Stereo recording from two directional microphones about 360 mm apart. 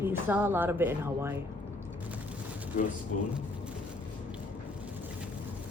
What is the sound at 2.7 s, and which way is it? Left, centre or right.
Speech, left.